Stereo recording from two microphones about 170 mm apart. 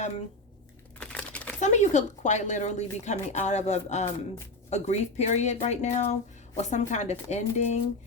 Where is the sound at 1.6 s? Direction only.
45° left (ahead or behind).